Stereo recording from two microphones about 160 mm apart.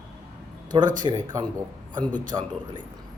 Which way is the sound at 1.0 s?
25° right (ahead or behind).